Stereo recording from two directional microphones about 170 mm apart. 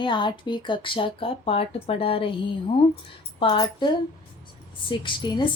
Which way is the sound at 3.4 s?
30° left (ahead or behind).